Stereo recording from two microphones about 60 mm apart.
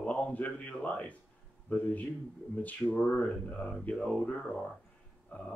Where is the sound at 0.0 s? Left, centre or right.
Left.